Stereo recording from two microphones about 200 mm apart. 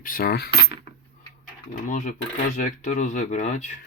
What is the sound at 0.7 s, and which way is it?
Cutlery, 25° right (ahead or behind).